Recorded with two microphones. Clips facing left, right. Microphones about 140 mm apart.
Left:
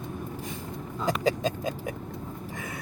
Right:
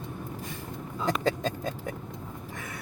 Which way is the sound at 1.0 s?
10° left (ahead or behind).